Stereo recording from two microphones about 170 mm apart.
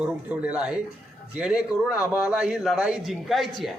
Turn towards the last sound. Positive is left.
turn(degrees=0)  # may be behind; listen again after turning